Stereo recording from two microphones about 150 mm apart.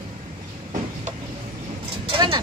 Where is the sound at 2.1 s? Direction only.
30° right (ahead or behind).